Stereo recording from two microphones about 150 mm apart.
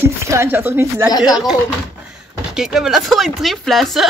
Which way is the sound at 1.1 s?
25° left (ahead or behind).